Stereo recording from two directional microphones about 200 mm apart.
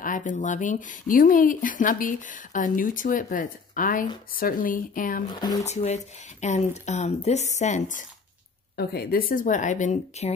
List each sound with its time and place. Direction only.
0.0 s a woman's voice: 40° left (ahead or behind)
5.3 s speech: 20° left (ahead or behind)
5.7 s a woman's voice: 35° left (ahead or behind)
8.7 s a woman's voice: 50° left (ahead or behind)